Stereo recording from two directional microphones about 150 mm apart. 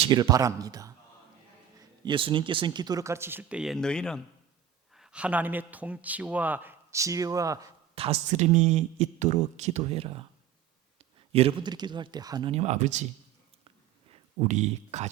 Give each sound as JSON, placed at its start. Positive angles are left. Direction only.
{"t": 0.1, "sound": "speech", "side_deg": -25}
{"t": 2.0, "sound": "speech", "side_deg": -35}
{"t": 4.9, "sound": "a man's voice", "side_deg": -5}
{"t": 7.9, "sound": "speech", "side_deg": -40}
{"t": 12.5, "sound": "speech", "side_deg": -45}
{"t": 14.4, "sound": "speech", "side_deg": -50}